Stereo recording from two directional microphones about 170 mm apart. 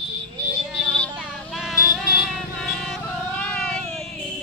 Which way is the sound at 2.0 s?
65° left (ahead or behind).